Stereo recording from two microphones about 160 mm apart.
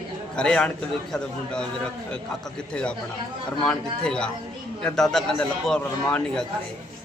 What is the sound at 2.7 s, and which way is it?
A man's voice, 5° left (ahead or behind).